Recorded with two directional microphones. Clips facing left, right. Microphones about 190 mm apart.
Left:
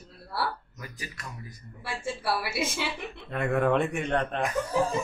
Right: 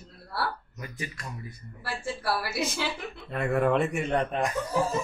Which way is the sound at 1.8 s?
Centre (ahead or behind).